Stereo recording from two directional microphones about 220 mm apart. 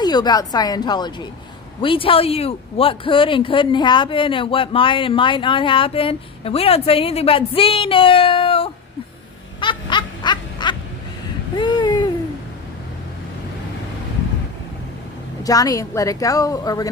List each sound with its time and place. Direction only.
0.0 s speech: 20° left (ahead or behind)
9.6 s a sound: 20° left (ahead or behind)
15.4 s a woman's voice: 15° left (ahead or behind)